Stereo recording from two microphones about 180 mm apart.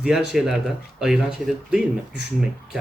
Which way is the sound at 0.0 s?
5° right (ahead or behind).